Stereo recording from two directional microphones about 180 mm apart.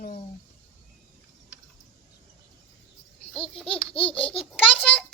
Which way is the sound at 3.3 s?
30° left (ahead or behind).